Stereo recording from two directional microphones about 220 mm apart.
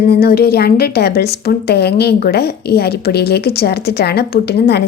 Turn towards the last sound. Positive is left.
turn(degrees=50)  # may be behind; listen again after turning